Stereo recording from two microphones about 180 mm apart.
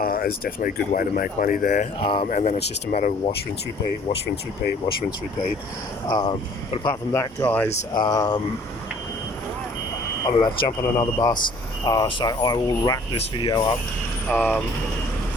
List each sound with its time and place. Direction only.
0.0 s speech: 55° left (ahead or behind)
2.0 s speech: 30° left (ahead or behind)
2.2 s speech: 40° left (ahead or behind)
2.6 s speech: 50° left (ahead or behind)
6.1 s speech: 25° left (ahead or behind)
7.1 s speech: 15° left (ahead or behind)
8.0 s speech: 20° left (ahead or behind)
10.2 s speech: 25° left (ahead or behind)
14.3 s speech: 10° left (ahead or behind)